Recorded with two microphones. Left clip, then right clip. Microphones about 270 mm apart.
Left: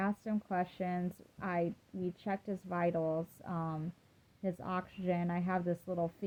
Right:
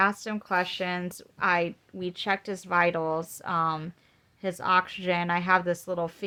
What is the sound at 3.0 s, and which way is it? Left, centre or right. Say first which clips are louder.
Speech: right 7 dB; right.